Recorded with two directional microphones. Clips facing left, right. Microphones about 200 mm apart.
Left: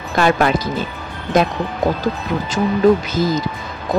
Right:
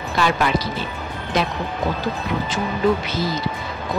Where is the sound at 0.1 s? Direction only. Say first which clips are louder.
Left 5 dB; 50° left (ahead or behind).